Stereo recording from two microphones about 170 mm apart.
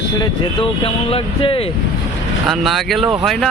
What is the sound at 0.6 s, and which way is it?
Speech, 30° left (ahead or behind).